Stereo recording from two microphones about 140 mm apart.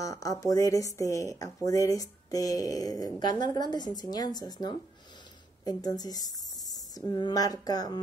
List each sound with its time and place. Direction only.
0.0 s speech: 25° left (ahead or behind)